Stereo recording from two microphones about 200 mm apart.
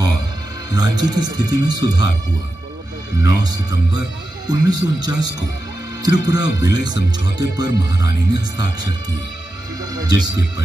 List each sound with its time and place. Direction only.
0.7 s speech: 20° right (ahead or behind)
3.2 s speech: 20° right (ahead or behind)
9.9 s speech: 20° right (ahead or behind)